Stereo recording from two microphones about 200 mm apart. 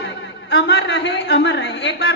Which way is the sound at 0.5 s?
60° left (ahead or behind).